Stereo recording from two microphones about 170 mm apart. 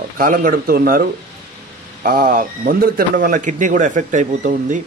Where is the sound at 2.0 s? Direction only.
55° right (ahead or behind).